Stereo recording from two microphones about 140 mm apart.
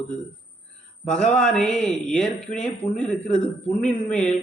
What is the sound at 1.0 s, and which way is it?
Speech, 5° left (ahead or behind).